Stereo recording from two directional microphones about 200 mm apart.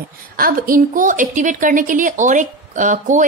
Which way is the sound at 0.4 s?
45° right (ahead or behind).